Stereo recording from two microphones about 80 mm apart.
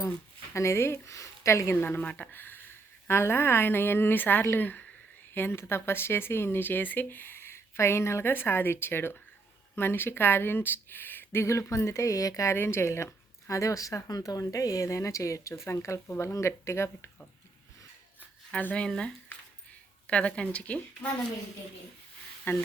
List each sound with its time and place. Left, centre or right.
0.5 s speech: left
12.5 s speech: left
18.5 s a woman's voice: centre
22.5 s speech: left